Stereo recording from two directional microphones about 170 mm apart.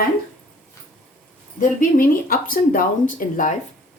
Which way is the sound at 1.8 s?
55° left (ahead or behind).